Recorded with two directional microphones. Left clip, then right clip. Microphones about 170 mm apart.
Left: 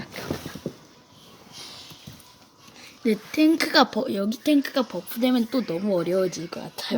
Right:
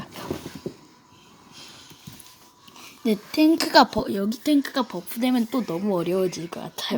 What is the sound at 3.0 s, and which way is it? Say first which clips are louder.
Speech: left 1 dB; 30° left (ahead or behind).